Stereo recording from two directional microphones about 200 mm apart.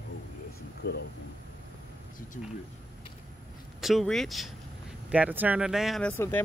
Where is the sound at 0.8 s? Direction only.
55° left (ahead or behind).